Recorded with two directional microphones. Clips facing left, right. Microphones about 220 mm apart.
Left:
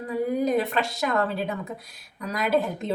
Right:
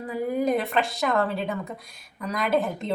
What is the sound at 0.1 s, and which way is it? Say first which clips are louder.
Speech: left 1 dB; centre (ahead or behind).